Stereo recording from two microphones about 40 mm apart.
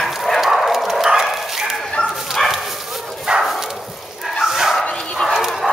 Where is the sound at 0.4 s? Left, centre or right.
Centre.